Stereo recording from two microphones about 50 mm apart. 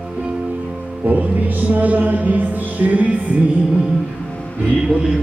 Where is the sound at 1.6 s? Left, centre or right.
Right.